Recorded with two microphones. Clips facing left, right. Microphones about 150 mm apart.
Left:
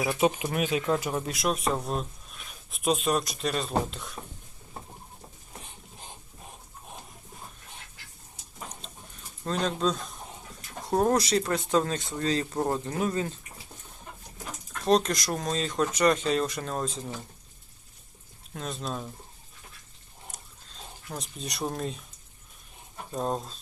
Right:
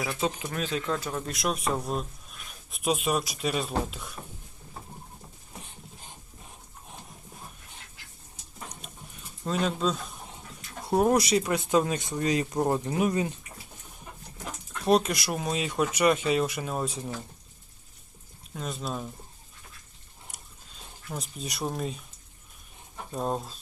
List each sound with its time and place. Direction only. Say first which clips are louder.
0.1 s speech: left 5 dB; 15° left (ahead or behind)
1.2 s speech: left 2 dB; centre (ahead or behind)
9.4 s speech: even; 5° right (ahead or behind)
14.8 s speech: even; 10° right (ahead or behind)
18.5 s speech: even; centre (ahead or behind)
20.3 s a sound: left 2 dB; 10° right (ahead or behind)
21.1 s speech: right 1 dB; centre (ahead or behind)
23.1 s speech: even; 5° right (ahead or behind)